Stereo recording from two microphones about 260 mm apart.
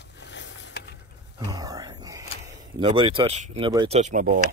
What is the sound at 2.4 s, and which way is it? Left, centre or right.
Speech, centre.